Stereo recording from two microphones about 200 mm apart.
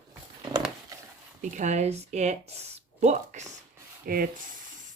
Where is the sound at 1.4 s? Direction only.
35° right (ahead or behind).